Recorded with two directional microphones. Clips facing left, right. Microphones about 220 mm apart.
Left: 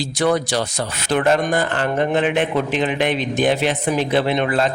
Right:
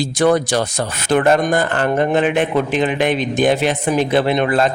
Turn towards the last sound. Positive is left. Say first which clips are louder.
# right 3 dB
turn(degrees=-50)  # may be behind; listen again after turning